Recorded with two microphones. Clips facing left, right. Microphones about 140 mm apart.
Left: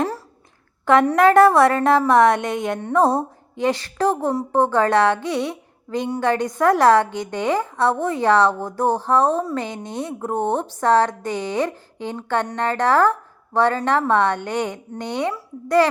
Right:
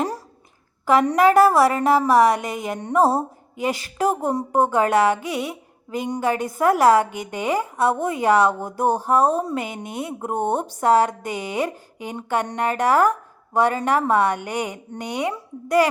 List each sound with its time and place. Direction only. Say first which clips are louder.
0.9 s a woman's voice: left 2 dB; 5° right (ahead or behind)
2.7 s a woman's voice: left 2 dB; 15° right (ahead or behind)
3.0 s a woman's voice: even; 5° right (ahead or behind)